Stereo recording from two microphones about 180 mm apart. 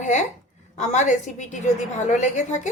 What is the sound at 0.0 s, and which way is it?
A woman's voice, 40° left (ahead or behind).